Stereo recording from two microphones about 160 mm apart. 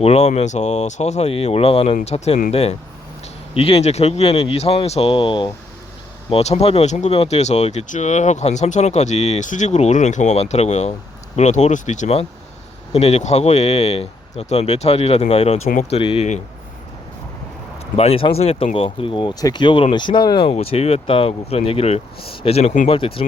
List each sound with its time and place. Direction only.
0.0 s speech: 40° left (ahead or behind)
15.7 s speech: 50° left (ahead or behind)
16.0 s speech: 35° left (ahead or behind)
17.9 s speech: 40° left (ahead or behind)